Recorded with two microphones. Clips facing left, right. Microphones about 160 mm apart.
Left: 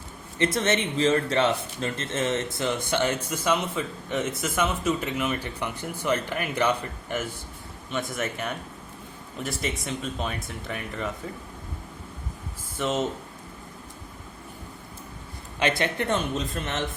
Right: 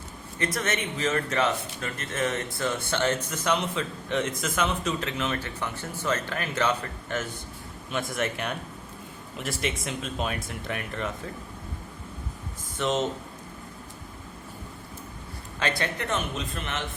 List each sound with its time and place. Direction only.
0.3 s a man's voice: 25° left (ahead or behind); by 7.3 s 10° left (ahead or behind)
7.9 s speech: centre (ahead or behind)
15.5 s speech: 20° left (ahead or behind)
16.6 s a man's voice: 40° left (ahead or behind)